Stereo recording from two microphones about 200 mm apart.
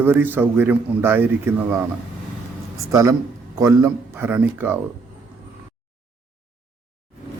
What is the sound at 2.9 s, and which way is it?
Speech, 15° right (ahead or behind).